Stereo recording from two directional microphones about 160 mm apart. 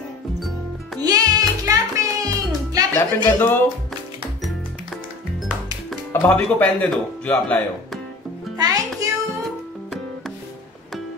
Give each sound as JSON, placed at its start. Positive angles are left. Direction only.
{"t": 1.0, "sound": "music", "side_deg": -20}
{"t": 3.0, "sound": "speech", "side_deg": 15}
{"t": 5.9, "sound": "speech", "side_deg": 10}
{"t": 8.5, "sound": "music", "side_deg": -25}